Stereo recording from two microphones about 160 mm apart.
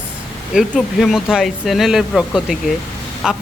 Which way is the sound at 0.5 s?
Centre (ahead or behind).